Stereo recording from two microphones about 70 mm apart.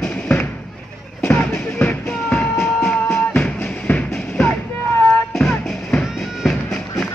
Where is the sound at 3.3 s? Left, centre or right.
Centre.